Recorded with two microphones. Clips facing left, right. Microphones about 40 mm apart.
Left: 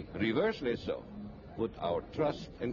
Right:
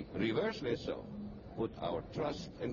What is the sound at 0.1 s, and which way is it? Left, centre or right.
Speech, centre.